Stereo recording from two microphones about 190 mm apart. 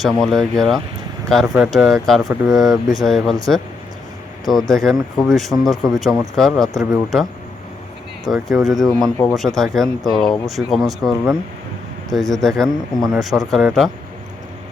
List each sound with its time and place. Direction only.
0.0 s speech: centre (ahead or behind)
4.7 s speech: centre (ahead or behind)
9.0 s speech: 15° left (ahead or behind)
9.6 s speech: centre (ahead or behind)